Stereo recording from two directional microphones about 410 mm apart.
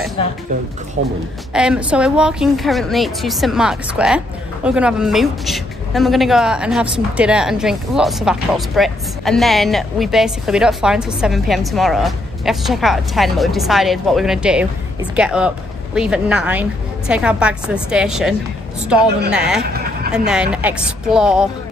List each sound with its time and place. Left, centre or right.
1.0 s a woman's voice: right
1.5 s a woman's voice: centre
19.3 s a woman's voice: centre